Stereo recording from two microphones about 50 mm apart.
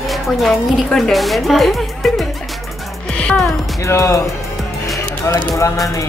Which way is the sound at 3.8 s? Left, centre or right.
Left.